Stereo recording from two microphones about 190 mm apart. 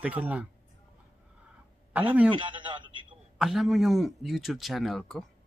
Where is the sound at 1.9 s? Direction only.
5° right (ahead or behind).